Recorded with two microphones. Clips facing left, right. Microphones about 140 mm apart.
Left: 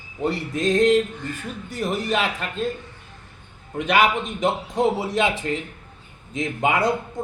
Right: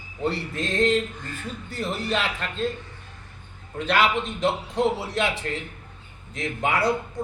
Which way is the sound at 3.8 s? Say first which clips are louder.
Left 2 dB; 15° left (ahead or behind).